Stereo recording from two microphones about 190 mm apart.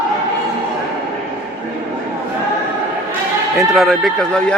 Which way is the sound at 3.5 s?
Centre (ahead or behind).